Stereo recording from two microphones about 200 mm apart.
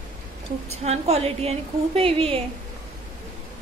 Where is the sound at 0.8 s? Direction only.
30° right (ahead or behind).